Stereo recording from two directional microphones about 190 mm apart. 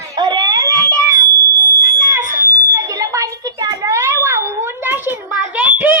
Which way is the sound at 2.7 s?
15° right (ahead or behind).